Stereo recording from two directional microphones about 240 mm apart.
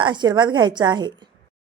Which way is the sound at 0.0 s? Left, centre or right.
Centre.